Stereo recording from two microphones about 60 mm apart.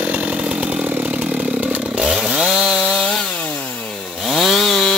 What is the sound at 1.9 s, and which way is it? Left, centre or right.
Chainsaw, centre.